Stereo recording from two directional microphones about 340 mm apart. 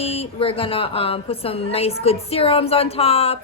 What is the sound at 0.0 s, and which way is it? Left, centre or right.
Speech, centre.